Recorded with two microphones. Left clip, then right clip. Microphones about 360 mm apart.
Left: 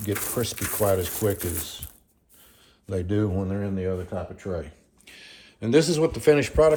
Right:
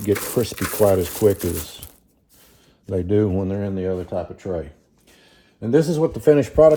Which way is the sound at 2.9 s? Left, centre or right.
Centre.